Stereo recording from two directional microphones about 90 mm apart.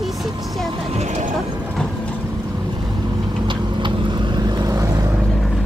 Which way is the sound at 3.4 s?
60° right (ahead or behind).